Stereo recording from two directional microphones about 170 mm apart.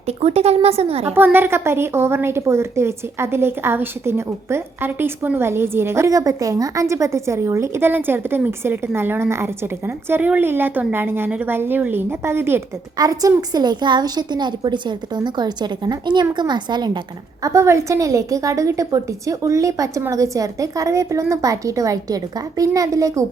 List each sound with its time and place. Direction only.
0.1 s speech: 35° right (ahead or behind)
1.1 s a woman's voice: 10° right (ahead or behind)